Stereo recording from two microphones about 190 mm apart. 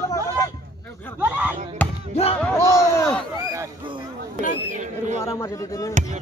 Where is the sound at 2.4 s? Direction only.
15° left (ahead or behind).